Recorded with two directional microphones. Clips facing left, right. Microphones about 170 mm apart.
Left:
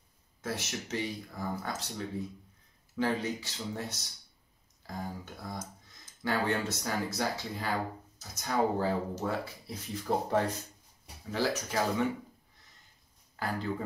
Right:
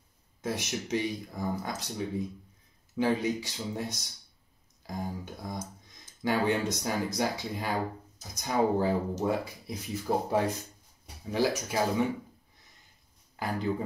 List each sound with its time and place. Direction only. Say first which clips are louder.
0.4 s speech: right 4 dB; 15° right (ahead or behind)
13.4 s speech: right 3 dB; 15° right (ahead or behind)